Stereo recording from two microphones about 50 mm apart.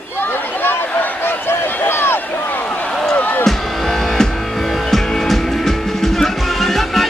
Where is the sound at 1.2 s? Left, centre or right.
Left.